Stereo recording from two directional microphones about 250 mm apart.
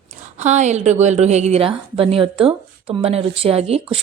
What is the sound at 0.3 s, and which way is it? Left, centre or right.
A woman's voice, right.